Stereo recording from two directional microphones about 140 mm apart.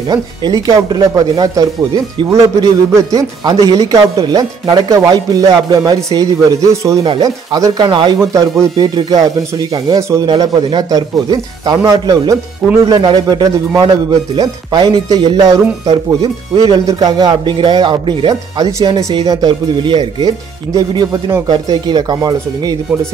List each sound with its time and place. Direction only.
0.1 s speech: 30° right (ahead or behind)
8.2 s speech: 20° right (ahead or behind)
16.5 s a man's voice: 25° right (ahead or behind)